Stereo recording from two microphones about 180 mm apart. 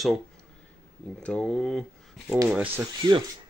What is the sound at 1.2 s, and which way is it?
Speech, 5° left (ahead or behind).